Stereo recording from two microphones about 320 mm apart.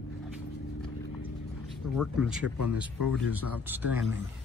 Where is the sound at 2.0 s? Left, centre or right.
Centre.